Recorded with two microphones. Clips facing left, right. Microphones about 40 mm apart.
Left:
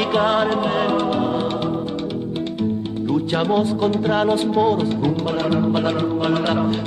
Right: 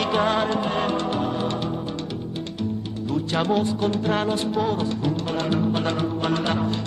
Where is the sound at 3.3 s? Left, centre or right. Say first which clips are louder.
Left 1 dB; centre.